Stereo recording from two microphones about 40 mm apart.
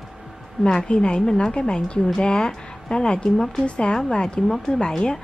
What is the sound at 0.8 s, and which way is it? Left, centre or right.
Speech, left.